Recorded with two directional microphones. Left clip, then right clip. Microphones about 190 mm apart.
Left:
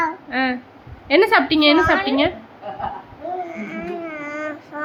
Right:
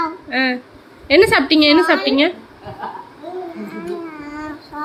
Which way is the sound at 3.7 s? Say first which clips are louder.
Even; 10° left (ahead or behind).